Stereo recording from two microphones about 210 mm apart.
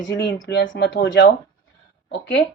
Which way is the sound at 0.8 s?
50° left (ahead or behind).